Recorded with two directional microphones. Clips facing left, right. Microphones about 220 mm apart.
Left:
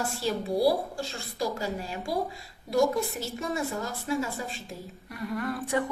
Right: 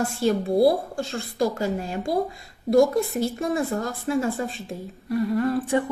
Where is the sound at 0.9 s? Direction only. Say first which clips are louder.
Right 7 dB; 50° right (ahead or behind).